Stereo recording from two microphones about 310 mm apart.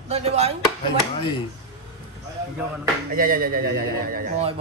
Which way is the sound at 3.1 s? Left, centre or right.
Right.